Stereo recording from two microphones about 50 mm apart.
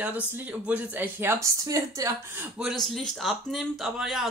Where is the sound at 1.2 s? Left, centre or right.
Right.